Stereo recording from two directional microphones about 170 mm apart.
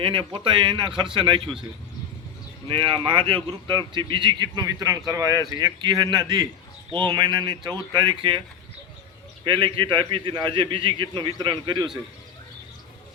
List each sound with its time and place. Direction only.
0.0 s speech: 30° right (ahead or behind)
2.6 s speech: 30° right (ahead or behind)
9.4 s speech: 30° right (ahead or behind)